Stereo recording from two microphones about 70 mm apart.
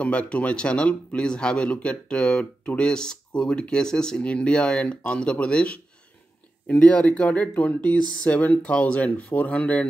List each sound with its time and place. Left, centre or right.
0.0 s speech: centre